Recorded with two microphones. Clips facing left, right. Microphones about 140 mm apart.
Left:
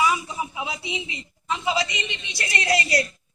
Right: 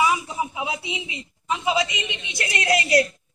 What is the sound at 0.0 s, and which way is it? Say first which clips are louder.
A man's voice: right 1 dB; 15° right (ahead or behind).